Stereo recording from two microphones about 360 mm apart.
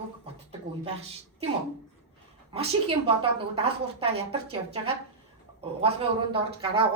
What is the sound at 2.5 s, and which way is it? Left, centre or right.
A woman's voice, centre.